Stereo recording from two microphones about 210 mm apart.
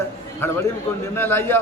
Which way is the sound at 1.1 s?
10° left (ahead or behind).